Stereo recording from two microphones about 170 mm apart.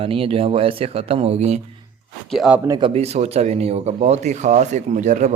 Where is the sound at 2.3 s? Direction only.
Centre (ahead or behind).